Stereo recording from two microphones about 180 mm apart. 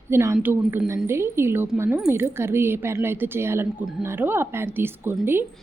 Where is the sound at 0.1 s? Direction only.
15° right (ahead or behind).